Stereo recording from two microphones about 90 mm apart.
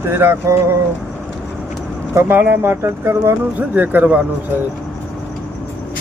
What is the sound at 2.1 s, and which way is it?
Speech, 25° right (ahead or behind).